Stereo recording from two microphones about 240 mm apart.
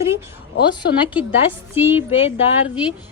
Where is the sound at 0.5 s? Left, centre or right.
Left.